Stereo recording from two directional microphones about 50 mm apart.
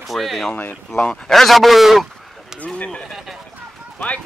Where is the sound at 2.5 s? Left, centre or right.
Centre.